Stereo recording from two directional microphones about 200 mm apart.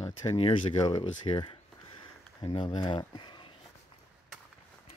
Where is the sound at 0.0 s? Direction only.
20° left (ahead or behind).